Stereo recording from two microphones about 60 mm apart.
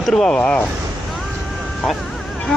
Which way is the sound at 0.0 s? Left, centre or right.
Centre.